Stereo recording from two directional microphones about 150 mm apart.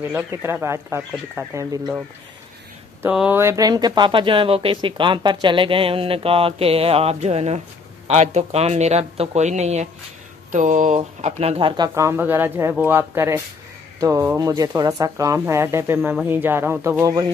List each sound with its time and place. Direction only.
0.1 s speech: 15° right (ahead or behind)
3.0 s speech: 10° right (ahead or behind); by 11.9 s 30° right (ahead or behind)
11.9 s speech: 15° right (ahead or behind)